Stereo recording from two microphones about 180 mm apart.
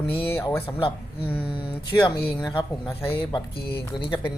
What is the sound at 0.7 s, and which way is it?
Speech, 30° left (ahead or behind).